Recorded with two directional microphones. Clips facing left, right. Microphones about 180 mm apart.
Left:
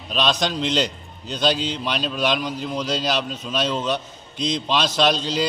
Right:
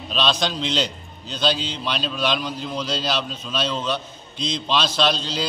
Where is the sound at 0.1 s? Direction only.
15° left (ahead or behind).